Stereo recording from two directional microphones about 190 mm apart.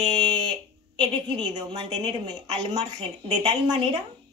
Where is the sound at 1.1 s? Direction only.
20° right (ahead or behind).